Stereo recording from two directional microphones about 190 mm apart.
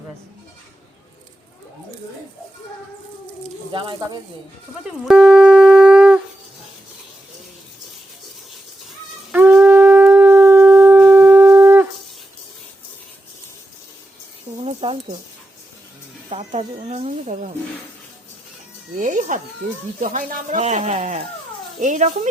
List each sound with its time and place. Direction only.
3.7 s speech: 25° right (ahead or behind)
4.8 s shofar: 5° right (ahead or behind)
9.3 s shofar: 5° right (ahead or behind)
14.6 s a sound: 30° right (ahead or behind)
16.3 s speech: 35° right (ahead or behind)
18.9 s speech: 40° right (ahead or behind)